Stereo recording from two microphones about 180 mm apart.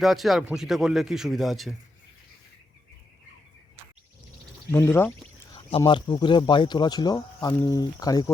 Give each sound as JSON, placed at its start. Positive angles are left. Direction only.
{"t": 0.0, "sound": "a man's voice", "side_deg": 0}
{"t": 4.7, "sound": "speech", "side_deg": 15}
{"t": 5.5, "sound": "speech", "side_deg": 30}